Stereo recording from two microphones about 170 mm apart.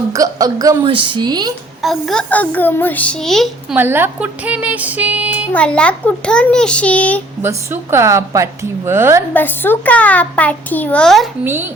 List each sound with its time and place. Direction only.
0.1 s a woman's voice: 20° right (ahead or behind)
0.9 s a woman's voice: 30° right (ahead or behind)
1.8 s a child's voice: centre (ahead or behind)
3.8 s a woman's voice: 10° right (ahead or behind)
5.5 s a child's voice: 5° left (ahead or behind)
7.4 s a woman's voice: 15° right (ahead or behind)
9.3 s a child's voice: 10° left (ahead or behind)
11.4 s a woman's voice: 10° right (ahead or behind)